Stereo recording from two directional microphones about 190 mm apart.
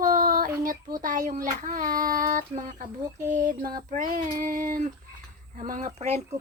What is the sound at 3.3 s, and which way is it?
Child singing, 45° right (ahead or behind).